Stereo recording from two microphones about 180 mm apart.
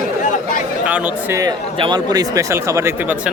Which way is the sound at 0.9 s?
10° right (ahead or behind).